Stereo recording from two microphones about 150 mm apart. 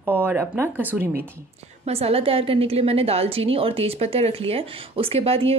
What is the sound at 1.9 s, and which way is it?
A woman's voice, 40° right (ahead or behind).